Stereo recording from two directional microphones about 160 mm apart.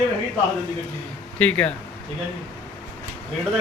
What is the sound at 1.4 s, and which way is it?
Speech, 10° left (ahead or behind).